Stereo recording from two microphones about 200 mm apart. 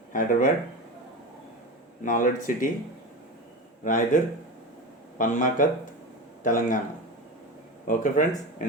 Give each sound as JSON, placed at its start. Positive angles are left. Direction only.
{"t": 0.1, "sound": "speech", "side_deg": 40}
{"t": 2.0, "sound": "speech", "side_deg": 40}
{"t": 3.8, "sound": "speech", "side_deg": 40}
{"t": 7.9, "sound": "speech", "side_deg": 40}